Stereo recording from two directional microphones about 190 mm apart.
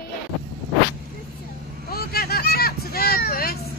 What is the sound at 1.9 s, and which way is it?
Vehicle, 55° left (ahead or behind).